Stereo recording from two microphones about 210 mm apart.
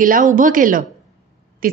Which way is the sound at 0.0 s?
40° right (ahead or behind).